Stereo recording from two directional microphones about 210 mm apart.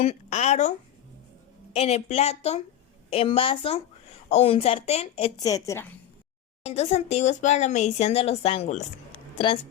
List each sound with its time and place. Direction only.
0.0 s speech: 30° left (ahead or behind)
1.7 s a woman's voice: 30° left (ahead or behind)
5.4 s a woman's voice: 15° left (ahead or behind)
6.7 s speech: 30° left (ahead or behind)